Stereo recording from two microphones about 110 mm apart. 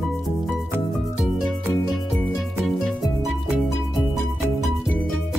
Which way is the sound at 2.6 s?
Centre (ahead or behind).